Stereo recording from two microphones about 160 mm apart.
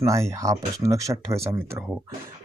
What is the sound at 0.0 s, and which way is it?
Speech, 20° right (ahead or behind).